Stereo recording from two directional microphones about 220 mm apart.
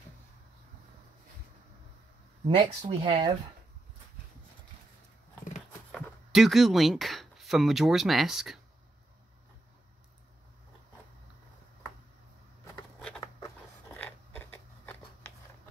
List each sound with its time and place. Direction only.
2.4 s speech: 20° right (ahead or behind)
5.9 s speech: centre (ahead or behind)
13.9 s a sound: 10° left (ahead or behind)